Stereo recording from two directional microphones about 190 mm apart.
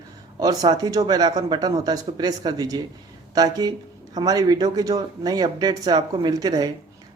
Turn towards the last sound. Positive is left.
turn(degrees=-20)  # may be behind; listen again after turning